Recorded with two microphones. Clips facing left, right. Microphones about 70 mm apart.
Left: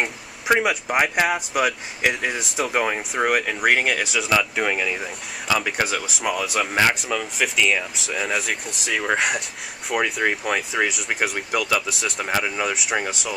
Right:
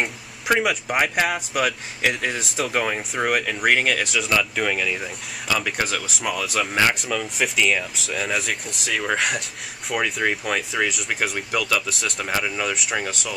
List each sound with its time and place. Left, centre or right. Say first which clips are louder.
0.0 s speech: left 1 dB; centre